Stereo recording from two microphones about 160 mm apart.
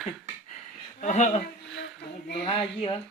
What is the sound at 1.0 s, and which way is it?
Speech, 45° left (ahead or behind).